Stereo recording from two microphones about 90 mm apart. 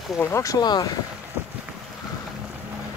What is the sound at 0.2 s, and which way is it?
Speech, 30° left (ahead or behind).